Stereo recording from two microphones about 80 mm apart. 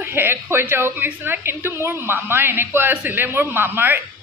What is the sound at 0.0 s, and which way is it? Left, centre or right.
Speech, right.